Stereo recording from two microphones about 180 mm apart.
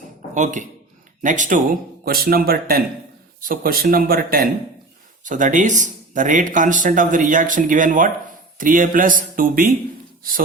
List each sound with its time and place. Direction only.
0.3 s speech: 45° right (ahead or behind)
2.0 s speech: 55° right (ahead or behind)